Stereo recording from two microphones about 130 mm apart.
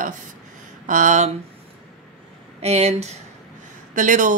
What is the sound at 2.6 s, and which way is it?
Speech, 55° right (ahead or behind).